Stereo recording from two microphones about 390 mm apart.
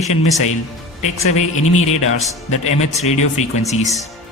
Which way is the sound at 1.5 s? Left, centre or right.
Left.